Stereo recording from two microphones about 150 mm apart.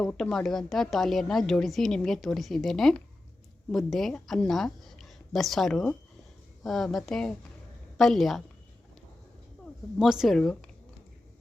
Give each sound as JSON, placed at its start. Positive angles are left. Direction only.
{"t": 0.0, "sound": "a woman's voice", "side_deg": 5}
{"t": 10.0, "sound": "speech", "side_deg": -5}